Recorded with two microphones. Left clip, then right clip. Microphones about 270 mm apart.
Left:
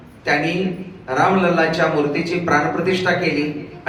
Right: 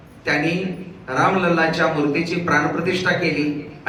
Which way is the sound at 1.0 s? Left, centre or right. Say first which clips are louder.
Left 2 dB; centre.